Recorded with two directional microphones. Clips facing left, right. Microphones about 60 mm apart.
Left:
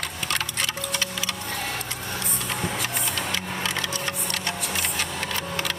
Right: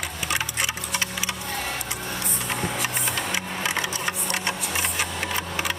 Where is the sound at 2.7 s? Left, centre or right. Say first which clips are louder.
Right 1 dB; centre.